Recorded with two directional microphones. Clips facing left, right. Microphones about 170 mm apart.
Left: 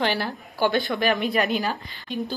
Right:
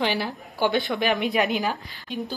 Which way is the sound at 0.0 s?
15° right (ahead or behind).